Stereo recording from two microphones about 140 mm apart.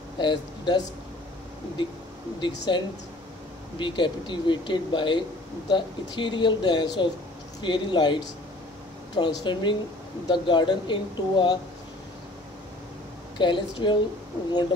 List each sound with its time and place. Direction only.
0.2 s speech: 35° left (ahead or behind)
2.4 s speech: 35° left (ahead or behind)
13.4 s speech: 35° left (ahead or behind)